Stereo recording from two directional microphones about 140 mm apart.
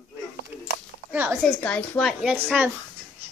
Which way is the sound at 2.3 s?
15° right (ahead or behind).